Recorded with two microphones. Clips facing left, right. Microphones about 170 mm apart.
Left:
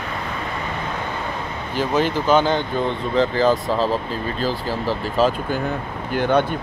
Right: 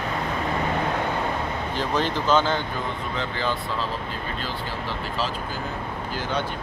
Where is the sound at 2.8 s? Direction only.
35° left (ahead or behind).